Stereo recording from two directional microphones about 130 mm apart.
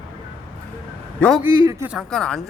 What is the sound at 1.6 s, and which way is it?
Speech, 30° right (ahead or behind).